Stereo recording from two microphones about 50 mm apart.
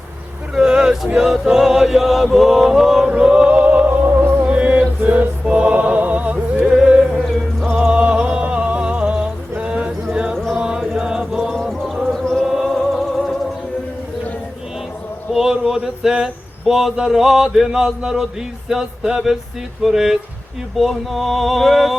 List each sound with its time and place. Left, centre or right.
0.5 s male singing: centre
3.1 s music: centre; by 4.4 s right
4.4 s music: right
6.7 s music: centre
7.2 s music: centre
7.9 s a sound: right
10.3 s chant: centre
10.9 s music: centre
11.5 s music: centre
15.3 s speech: centre
18.7 s male singing: centre
20.7 s a sound: centre